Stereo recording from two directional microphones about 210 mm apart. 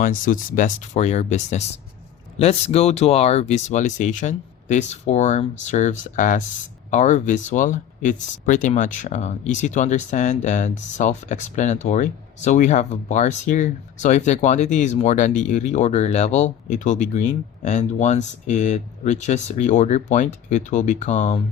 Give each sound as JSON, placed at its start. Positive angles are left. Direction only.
{"t": 0.0, "sound": "speech", "side_deg": 40}